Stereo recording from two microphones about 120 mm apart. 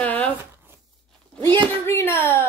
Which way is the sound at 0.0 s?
10° left (ahead or behind).